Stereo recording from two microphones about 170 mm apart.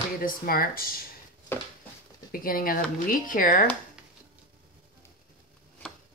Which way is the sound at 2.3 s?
55° left (ahead or behind).